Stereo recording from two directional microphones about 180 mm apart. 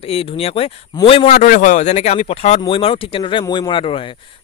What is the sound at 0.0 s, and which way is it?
A man's voice, 30° left (ahead or behind).